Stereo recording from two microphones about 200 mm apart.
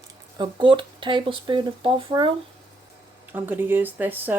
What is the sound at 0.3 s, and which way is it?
Speech, 25° right (ahead or behind).